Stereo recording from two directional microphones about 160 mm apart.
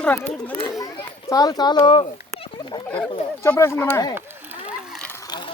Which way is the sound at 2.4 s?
30° left (ahead or behind).